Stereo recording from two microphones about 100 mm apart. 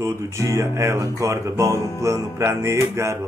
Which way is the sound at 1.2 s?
30° right (ahead or behind).